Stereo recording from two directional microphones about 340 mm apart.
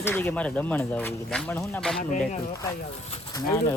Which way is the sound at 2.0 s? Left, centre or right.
Left.